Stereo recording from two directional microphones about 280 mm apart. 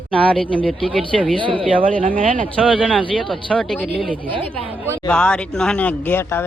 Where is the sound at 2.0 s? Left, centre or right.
Right.